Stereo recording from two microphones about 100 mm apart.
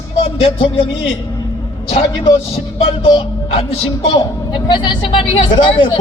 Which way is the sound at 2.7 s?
65° left (ahead or behind).